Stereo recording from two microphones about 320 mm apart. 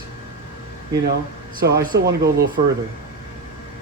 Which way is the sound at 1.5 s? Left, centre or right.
Right.